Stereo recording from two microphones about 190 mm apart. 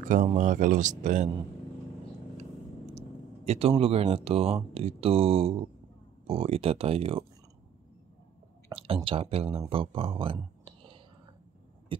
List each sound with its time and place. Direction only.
0.0 s speech: 45° right (ahead or behind)
2.9 s speech: 35° right (ahead or behind)
8.6 s speech: 30° right (ahead or behind)